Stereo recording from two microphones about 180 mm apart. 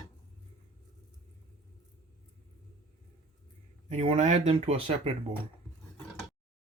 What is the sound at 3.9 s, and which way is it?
Speech, 35° right (ahead or behind).